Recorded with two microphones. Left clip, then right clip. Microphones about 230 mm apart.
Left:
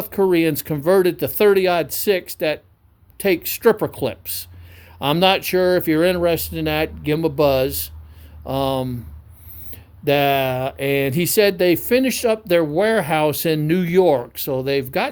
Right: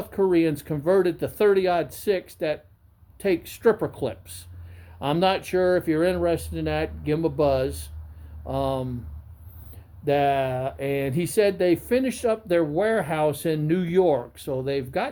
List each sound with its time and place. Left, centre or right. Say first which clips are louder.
0.0 s speech: left 4 dB; left